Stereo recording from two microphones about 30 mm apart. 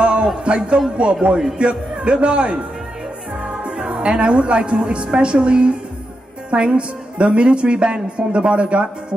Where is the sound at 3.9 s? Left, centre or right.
Right.